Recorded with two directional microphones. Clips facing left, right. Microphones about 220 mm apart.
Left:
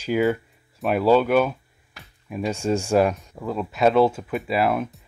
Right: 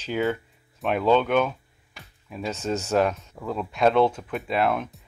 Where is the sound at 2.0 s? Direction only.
Centre (ahead or behind).